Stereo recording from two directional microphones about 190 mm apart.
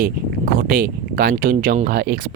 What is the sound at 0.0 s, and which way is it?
Speech, 50° right (ahead or behind).